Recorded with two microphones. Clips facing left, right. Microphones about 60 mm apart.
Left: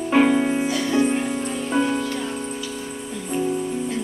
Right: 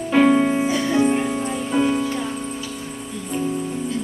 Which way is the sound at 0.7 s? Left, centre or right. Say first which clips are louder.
Right 2 dB; right.